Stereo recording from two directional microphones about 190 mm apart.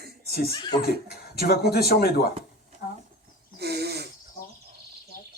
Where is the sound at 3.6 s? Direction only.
60° right (ahead or behind).